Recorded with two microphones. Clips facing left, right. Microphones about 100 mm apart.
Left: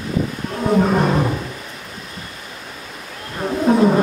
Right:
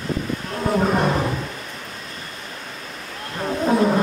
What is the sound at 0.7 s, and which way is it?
Roar, centre (ahead or behind).